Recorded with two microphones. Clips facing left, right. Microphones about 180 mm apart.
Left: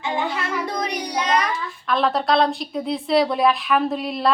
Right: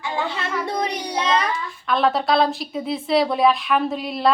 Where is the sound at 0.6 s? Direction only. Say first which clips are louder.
Right 1 dB; 25° right (ahead or behind).